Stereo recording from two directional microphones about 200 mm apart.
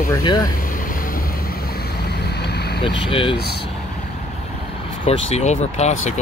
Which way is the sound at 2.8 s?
25° left (ahead or behind).